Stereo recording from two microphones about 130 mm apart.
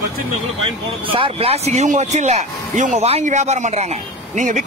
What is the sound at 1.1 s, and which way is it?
A man's voice, 45° right (ahead or behind).